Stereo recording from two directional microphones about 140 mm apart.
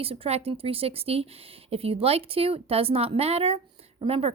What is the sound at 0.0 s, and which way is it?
Speech, 45° right (ahead or behind).